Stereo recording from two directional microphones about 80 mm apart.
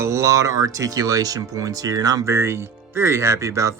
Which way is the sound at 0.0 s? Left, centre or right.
Right.